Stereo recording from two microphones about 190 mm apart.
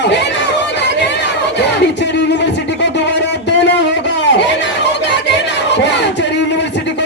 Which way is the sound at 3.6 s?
65° left (ahead or behind).